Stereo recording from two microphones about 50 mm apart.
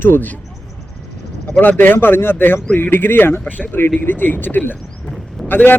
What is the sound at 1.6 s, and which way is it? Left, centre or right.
Speech, left.